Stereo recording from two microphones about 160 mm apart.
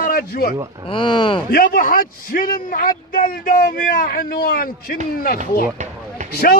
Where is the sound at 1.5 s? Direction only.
60° left (ahead or behind).